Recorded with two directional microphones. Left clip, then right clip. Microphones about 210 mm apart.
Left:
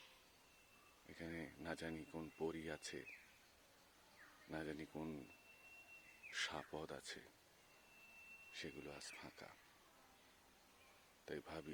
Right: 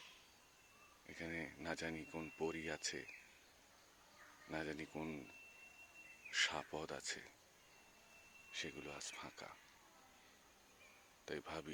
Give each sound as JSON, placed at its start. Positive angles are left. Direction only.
{"t": 1.0, "sound": "speech", "side_deg": 10}
{"t": 4.5, "sound": "speech", "side_deg": 5}
{"t": 6.3, "sound": "speech", "side_deg": 10}
{"t": 8.5, "sound": "speech", "side_deg": 10}
{"t": 11.3, "sound": "speech", "side_deg": 10}